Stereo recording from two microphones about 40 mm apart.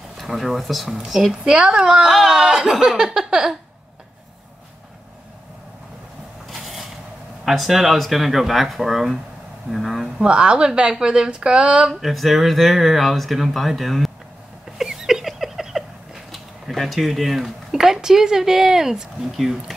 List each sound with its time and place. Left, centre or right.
0.2 s speech: centre
1.4 s speech: centre
2.0 s speech: centre
2.3 s speech: centre
6.5 s a sound: centre
7.4 s speech: centre
10.2 s speech: right
11.9 s speech: centre
14.8 s a sound: centre
16.7 s speech: centre